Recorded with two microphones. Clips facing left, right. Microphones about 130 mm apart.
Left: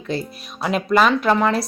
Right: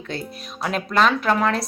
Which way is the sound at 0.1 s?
5° left (ahead or behind).